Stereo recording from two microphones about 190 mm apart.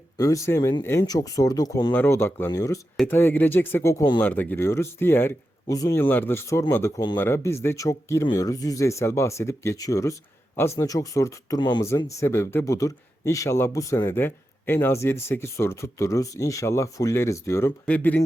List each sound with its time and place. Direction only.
0.2 s speech: 15° left (ahead or behind)